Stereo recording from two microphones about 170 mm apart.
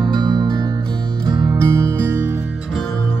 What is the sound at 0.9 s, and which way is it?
Music, 5° left (ahead or behind).